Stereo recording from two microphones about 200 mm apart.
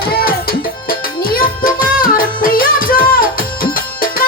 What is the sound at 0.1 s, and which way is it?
Music, 50° left (ahead or behind).